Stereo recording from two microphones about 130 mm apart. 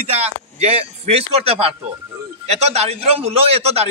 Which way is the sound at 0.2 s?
50° right (ahead or behind).